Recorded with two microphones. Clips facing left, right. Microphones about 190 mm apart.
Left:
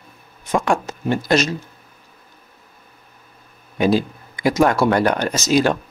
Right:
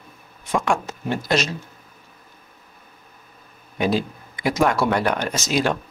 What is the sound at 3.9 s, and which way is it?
Speech, 40° left (ahead or behind).